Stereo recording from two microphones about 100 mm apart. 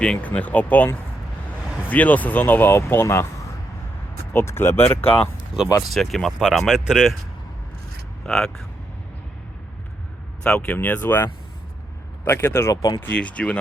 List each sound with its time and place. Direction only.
0.0 s speech: 10° left (ahead or behind)
1.9 s speech: 15° left (ahead or behind)
4.3 s speech: 25° left (ahead or behind)
5.6 s speech: 45° left (ahead or behind)
5.9 s speech: centre (ahead or behind)
8.3 s speech: 5° left (ahead or behind)
10.4 s speech: 15° left (ahead or behind)
12.7 s speech: 40° left (ahead or behind)
13.0 s speech: 15° left (ahead or behind)